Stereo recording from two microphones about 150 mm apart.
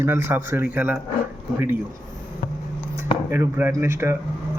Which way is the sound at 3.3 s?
15° right (ahead or behind).